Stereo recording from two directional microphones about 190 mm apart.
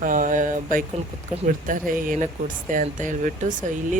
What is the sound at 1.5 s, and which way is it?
Speech, 45° right (ahead or behind).